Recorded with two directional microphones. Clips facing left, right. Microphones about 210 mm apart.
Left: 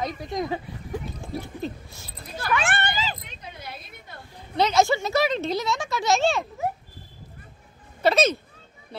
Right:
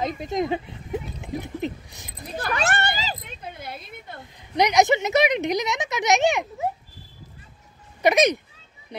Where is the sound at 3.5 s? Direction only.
55° right (ahead or behind).